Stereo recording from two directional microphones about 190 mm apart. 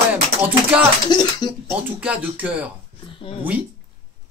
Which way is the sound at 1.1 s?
25° left (ahead or behind).